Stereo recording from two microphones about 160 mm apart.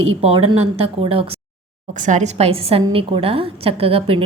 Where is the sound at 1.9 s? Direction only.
50° right (ahead or behind).